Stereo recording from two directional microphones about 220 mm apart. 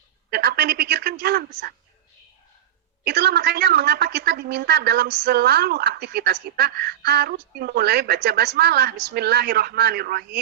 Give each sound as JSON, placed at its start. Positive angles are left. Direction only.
{"t": 0.3, "sound": "a man's voice", "side_deg": -45}
{"t": 3.0, "sound": "a woman's voice", "side_deg": -50}